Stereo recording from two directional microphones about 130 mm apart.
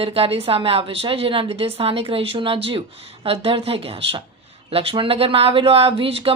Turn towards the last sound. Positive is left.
turn(degrees=-45)  # may be behind; listen again after turning